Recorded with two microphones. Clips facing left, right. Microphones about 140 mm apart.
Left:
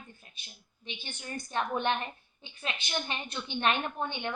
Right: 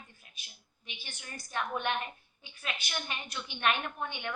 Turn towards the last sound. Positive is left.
turn(degrees=25)  # may be behind; listen again after turning